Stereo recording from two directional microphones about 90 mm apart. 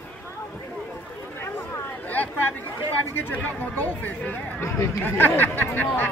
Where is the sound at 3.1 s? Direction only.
20° left (ahead or behind).